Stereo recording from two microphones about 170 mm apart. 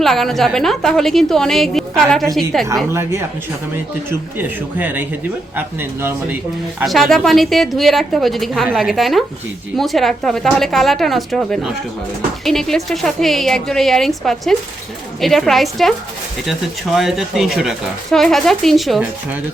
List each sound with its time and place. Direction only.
0.0 s speech: centre (ahead or behind)
2.9 s a man's voice: 15° right (ahead or behind)
4.4 s a man's voice: 10° right (ahead or behind)
6.8 s speech: centre (ahead or behind)